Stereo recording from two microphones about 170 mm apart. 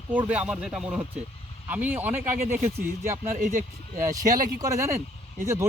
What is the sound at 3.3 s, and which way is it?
Speech, 45° right (ahead or behind).